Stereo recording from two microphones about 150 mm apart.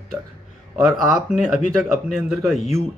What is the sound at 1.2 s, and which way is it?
Speech, 5° right (ahead or behind).